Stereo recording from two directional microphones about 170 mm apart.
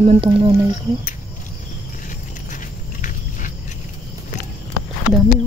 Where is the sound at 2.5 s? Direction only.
50° left (ahead or behind).